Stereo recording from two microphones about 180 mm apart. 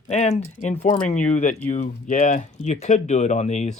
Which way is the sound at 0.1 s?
35° left (ahead or behind).